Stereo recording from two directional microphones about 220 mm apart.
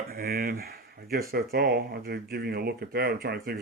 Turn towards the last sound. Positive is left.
turn(degrees=-45)  # may be behind; listen again after turning